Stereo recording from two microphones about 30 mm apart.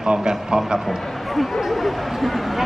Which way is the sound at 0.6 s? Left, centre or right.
Centre.